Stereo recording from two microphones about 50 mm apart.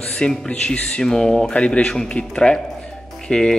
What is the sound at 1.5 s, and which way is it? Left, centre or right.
Speech, left.